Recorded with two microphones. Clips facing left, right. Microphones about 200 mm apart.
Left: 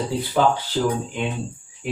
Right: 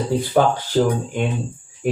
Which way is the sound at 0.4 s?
50° right (ahead or behind).